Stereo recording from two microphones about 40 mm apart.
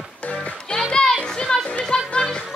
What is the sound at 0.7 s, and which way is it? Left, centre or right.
Music, centre.